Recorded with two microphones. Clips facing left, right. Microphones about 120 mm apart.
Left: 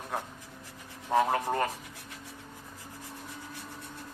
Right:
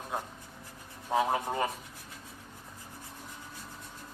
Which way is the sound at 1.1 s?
10° right (ahead or behind).